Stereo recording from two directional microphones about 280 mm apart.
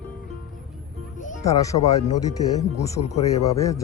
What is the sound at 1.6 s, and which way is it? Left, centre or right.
Speech, centre.